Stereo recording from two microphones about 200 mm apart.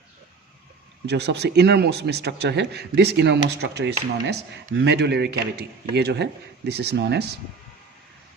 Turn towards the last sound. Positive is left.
turn(degrees=-55)  # may be behind; listen again after turning